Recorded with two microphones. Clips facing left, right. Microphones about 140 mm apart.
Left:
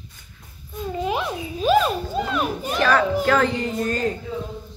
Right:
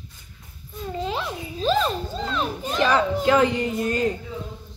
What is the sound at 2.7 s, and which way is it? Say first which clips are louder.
Children playing: left 1 dB; 20° right (ahead or behind).